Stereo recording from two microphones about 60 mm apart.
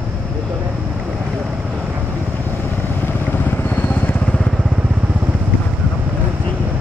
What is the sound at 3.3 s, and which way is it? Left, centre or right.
Vehicle, left.